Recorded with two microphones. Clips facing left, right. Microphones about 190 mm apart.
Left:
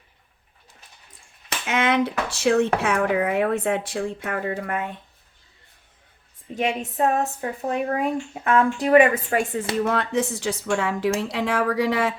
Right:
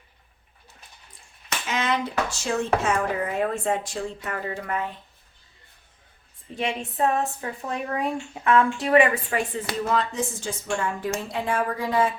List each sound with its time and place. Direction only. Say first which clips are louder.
1.6 s speech: left 5 dB; 60° left (ahead or behind)
6.6 s speech: left 2 dB; 40° left (ahead or behind)
9.8 s speech: even; 60° left (ahead or behind); by 12.1 s 75° left (ahead or behind)